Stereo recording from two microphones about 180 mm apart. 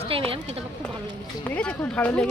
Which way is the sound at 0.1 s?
30° right (ahead or behind).